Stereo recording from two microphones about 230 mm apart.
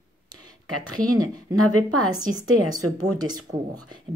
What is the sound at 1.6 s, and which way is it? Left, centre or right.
Speech, right.